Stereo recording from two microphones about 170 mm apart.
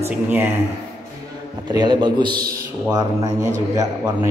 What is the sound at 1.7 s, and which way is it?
A man's voice, 25° right (ahead or behind).